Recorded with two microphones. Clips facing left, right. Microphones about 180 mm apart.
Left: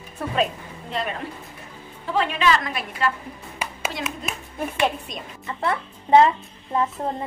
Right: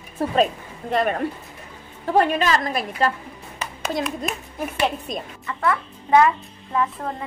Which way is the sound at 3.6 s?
10° left (ahead or behind).